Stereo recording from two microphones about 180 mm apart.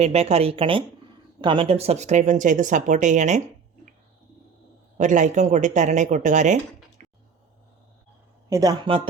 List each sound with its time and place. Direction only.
0.0 s speech: 35° right (ahead or behind)
4.9 s speech: 45° right (ahead or behind)
7.0 s a sound: 45° right (ahead or behind)
8.4 s speech: 20° right (ahead or behind)